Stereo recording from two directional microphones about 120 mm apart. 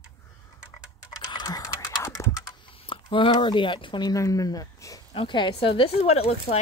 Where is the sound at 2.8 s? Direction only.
45° left (ahead or behind); by 5.0 s 30° left (ahead or behind).